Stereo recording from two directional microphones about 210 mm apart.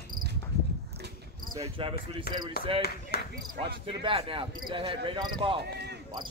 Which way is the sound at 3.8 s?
25° right (ahead or behind).